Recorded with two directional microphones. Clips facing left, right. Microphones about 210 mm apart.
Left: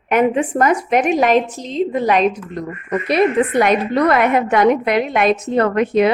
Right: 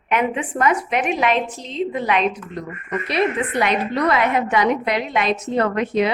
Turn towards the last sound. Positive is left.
turn(degrees=55)  # may be behind; listen again after turning